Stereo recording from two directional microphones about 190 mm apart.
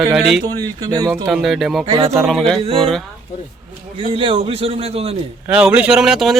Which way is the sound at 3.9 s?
30° right (ahead or behind).